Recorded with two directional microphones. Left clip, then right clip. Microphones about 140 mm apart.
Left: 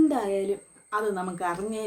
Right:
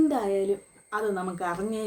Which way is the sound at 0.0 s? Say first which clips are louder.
Even; 5° left (ahead or behind).